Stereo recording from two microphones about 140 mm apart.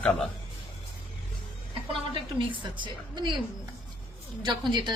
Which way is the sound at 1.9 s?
35° right (ahead or behind).